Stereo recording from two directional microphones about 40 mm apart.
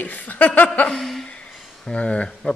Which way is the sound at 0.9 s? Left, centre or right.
Centre.